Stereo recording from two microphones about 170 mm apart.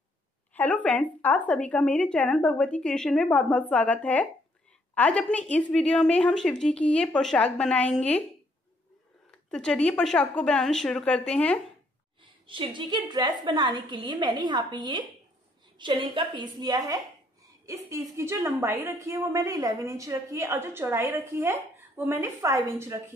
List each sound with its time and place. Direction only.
0.6 s a woman's voice: 10° left (ahead or behind)
9.3 s a woman's voice: 5° left (ahead or behind)
12.4 s a woman's voice: 30° right (ahead or behind)